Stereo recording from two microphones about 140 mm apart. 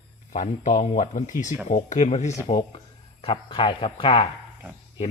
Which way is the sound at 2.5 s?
40° left (ahead or behind).